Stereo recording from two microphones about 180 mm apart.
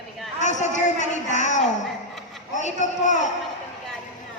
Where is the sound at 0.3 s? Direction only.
40° left (ahead or behind).